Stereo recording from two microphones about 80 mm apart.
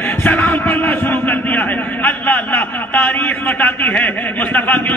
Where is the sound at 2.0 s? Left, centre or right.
Left.